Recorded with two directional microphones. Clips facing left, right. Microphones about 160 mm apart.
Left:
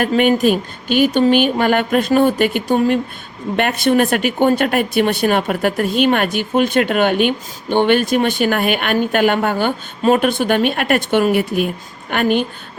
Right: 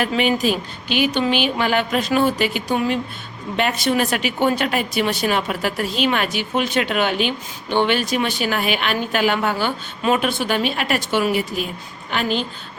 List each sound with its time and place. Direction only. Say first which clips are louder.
0.0 s a woman's voice: left 5 dB; 50° left (ahead or behind)